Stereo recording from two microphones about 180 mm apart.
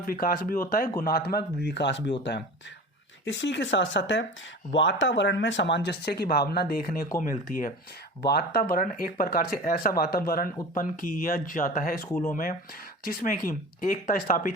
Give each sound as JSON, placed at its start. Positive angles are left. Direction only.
{"t": 0.0, "sound": "a man's voice", "side_deg": 55}
{"t": 3.2, "sound": "speech", "side_deg": 85}
{"t": 8.2, "sound": "speech", "side_deg": 65}